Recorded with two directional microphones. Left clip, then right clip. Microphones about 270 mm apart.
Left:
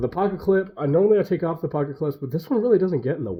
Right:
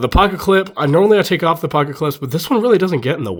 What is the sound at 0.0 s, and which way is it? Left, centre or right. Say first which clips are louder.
Speech: right 9 dB; right.